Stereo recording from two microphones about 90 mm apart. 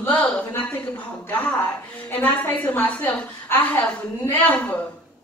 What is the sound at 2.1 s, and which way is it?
A woman's voice, 20° left (ahead or behind).